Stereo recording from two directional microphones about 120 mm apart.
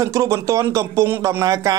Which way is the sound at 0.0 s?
25° right (ahead or behind).